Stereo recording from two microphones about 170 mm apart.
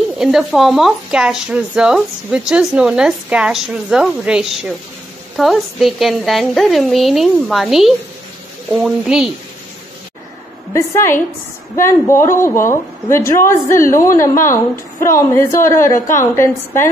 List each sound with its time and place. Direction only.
0.2 s speech: centre (ahead or behind)
10.7 s a woman's voice: 15° left (ahead or behind)